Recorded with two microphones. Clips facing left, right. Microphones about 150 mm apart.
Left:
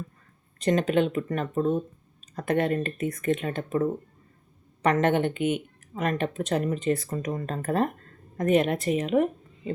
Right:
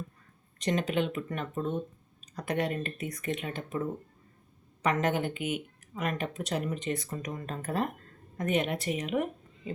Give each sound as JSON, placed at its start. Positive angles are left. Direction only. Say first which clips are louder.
{"t": 0.6, "sound": "speech", "louder": "left 6 dB", "side_deg": 45}
{"t": 4.9, "sound": "speech", "louder": "left 6 dB", "side_deg": -5}
{"t": 5.9, "sound": "a woman's voice", "louder": "left 6 dB", "side_deg": 45}